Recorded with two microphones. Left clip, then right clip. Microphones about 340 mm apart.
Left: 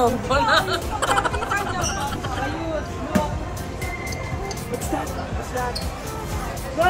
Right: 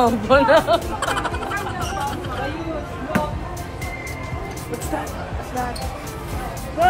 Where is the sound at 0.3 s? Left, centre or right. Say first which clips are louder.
Right 7 dB; right.